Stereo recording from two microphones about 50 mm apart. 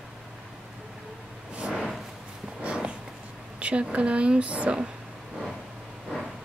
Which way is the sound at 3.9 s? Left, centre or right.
Right.